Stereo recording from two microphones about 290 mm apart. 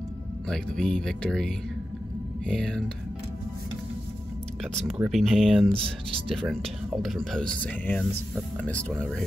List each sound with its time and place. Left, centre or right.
0.5 s speech: centre
4.8 s speech: centre
5.9 s speech: centre
6.3 s speech: centre